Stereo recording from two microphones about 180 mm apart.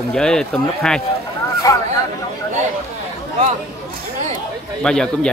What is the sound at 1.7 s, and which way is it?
Speech, 20° left (ahead or behind).